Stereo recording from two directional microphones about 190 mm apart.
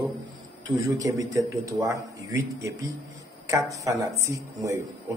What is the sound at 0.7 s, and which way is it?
A man's voice, 15° right (ahead or behind).